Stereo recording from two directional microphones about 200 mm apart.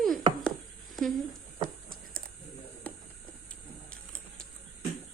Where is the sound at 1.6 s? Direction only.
45° right (ahead or behind).